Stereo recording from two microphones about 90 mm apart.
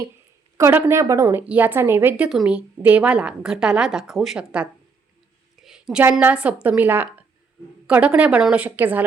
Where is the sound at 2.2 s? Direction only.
10° right (ahead or behind).